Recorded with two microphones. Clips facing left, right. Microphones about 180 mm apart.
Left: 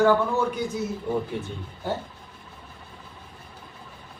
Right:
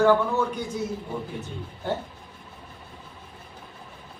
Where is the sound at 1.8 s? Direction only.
Centre (ahead or behind).